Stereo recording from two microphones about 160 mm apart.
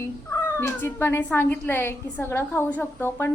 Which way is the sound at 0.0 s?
15° left (ahead or behind).